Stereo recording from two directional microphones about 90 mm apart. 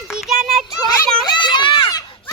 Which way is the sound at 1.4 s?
60° left (ahead or behind).